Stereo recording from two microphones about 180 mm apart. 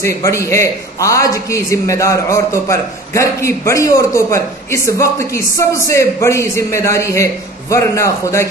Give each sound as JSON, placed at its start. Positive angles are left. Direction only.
{"t": 0.0, "sound": "a man's voice", "side_deg": 15}